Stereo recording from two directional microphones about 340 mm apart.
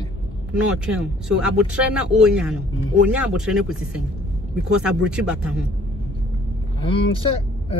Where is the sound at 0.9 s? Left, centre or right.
Centre.